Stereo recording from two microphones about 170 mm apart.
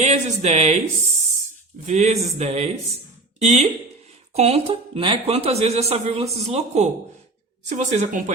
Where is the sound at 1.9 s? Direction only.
45° right (ahead or behind).